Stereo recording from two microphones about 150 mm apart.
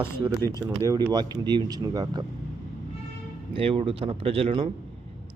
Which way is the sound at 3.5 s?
40° right (ahead or behind).